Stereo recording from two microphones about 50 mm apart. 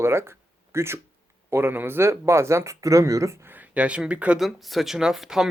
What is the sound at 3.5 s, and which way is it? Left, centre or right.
Speech, right.